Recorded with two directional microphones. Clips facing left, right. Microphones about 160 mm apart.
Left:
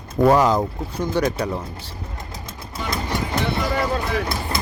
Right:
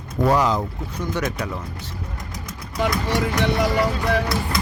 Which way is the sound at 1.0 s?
30° left (ahead or behind).